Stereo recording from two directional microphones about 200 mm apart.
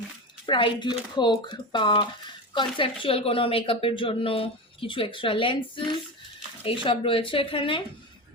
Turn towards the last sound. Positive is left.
turn(degrees=25)  # may be behind; listen again after turning